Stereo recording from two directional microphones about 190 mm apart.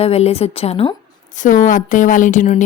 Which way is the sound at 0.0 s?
30° left (ahead or behind).